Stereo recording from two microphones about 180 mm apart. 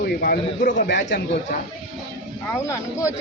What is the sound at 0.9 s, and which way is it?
Speech, 75° left (ahead or behind).